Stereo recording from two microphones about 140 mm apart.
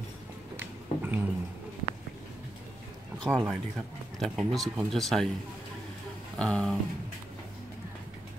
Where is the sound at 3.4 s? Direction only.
Centre (ahead or behind).